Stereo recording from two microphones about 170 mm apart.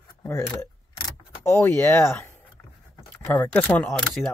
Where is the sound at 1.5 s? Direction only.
15° left (ahead or behind).